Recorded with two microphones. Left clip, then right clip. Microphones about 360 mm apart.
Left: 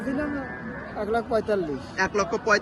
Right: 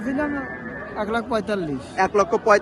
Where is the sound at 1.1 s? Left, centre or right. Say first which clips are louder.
Left 1 dB; right.